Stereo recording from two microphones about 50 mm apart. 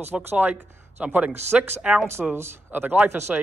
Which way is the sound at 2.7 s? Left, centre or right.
Right.